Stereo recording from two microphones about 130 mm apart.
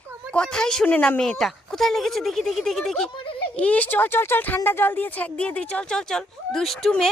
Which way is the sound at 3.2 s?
40° left (ahead or behind).